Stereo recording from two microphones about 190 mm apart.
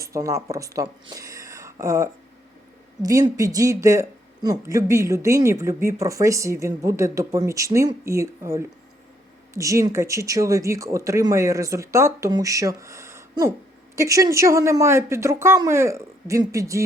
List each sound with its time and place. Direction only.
0.0 s speech: 15° right (ahead or behind)
1.1 s a sound: 15° right (ahead or behind)
3.0 s speech: 20° right (ahead or behind)